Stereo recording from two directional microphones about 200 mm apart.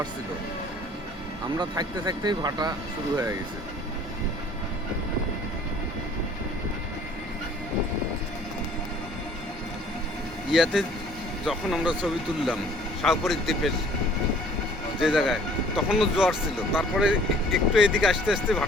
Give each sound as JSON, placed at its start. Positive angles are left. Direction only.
{"t": 1.5, "sound": "speech", "side_deg": -20}
{"t": 10.5, "sound": "speech", "side_deg": 0}
{"t": 15.0, "sound": "speech", "side_deg": 0}